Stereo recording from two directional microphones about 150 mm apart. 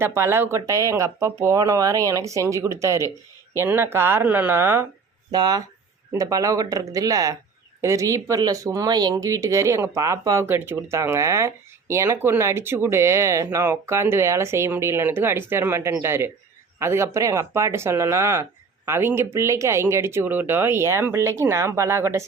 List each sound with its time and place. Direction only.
0.0 s speech: 15° right (ahead or behind)
5.3 s speech: 25° right (ahead or behind)